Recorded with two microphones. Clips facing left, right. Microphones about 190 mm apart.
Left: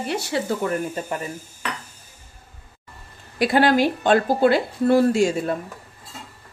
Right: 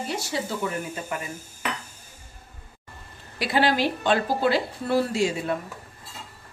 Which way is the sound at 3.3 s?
50° left (ahead or behind).